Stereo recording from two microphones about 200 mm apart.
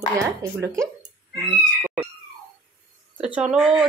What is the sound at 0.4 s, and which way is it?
Speech, 15° right (ahead or behind).